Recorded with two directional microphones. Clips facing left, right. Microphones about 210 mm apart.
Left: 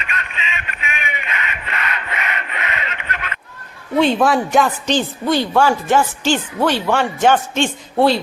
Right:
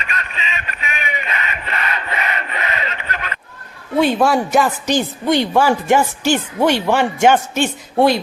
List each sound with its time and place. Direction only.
0.0 s a sound: 35° right (ahead or behind)
3.9 s a man's voice: 10° right (ahead or behind)
4.9 s a woman's voice: 15° right (ahead or behind)